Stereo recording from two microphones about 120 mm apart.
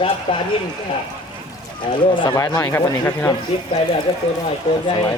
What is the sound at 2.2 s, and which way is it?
Speech, 35° left (ahead or behind).